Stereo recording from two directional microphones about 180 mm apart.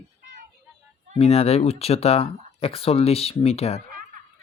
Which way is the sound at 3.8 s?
50° right (ahead or behind).